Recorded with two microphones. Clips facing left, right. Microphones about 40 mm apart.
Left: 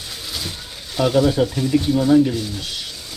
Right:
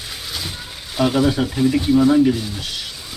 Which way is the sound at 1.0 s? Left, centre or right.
Centre.